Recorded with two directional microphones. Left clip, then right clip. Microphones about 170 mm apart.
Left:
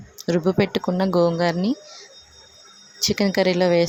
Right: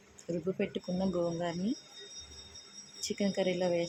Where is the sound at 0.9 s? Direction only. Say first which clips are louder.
Left 14 dB; 30° left (ahead or behind).